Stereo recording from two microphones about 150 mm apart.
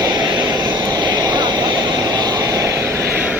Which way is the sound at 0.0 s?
25° right (ahead or behind).